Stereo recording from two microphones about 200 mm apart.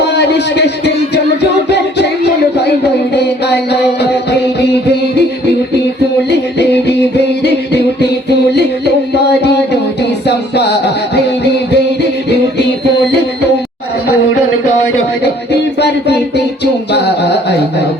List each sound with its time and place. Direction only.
0.0 s a sound: 55° left (ahead or behind)
3.1 s music: 55° left (ahead or behind)
6.2 s music: 55° left (ahead or behind)
10.0 s music: 55° left (ahead or behind)
15.8 s music: 55° left (ahead or behind)
16.9 s a sound: 55° left (ahead or behind)